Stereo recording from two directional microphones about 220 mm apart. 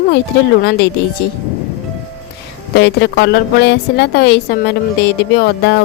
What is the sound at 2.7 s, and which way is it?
A woman's voice, 50° left (ahead or behind).